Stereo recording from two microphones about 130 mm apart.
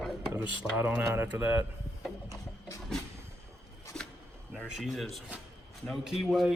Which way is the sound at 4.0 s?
5° left (ahead or behind).